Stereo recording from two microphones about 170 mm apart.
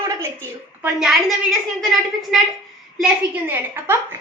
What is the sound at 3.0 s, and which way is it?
A woman's voice, 10° right (ahead or behind).